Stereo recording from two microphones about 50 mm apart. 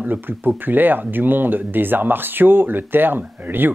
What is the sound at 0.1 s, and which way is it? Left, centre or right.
Speech, right.